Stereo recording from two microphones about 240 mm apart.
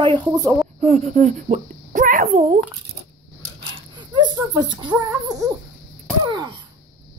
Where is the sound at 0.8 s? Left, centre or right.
Right.